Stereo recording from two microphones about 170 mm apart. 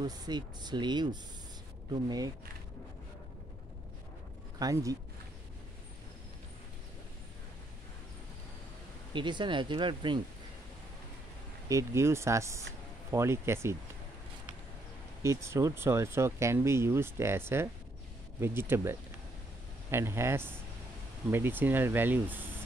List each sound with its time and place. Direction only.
0.0 s speech: 25° right (ahead or behind)
4.6 s speech: 20° right (ahead or behind)
9.1 s speech: 30° right (ahead or behind)
11.7 s speech: 15° right (ahead or behind)
15.2 s speech: 15° right (ahead or behind)